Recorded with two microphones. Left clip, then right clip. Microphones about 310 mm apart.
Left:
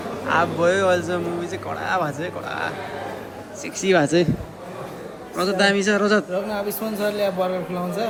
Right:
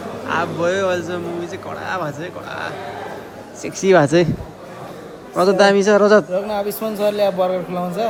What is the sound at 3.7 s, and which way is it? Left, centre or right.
Speech, centre.